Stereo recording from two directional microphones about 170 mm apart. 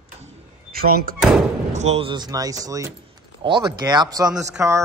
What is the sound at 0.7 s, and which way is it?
Speech, 60° right (ahead or behind).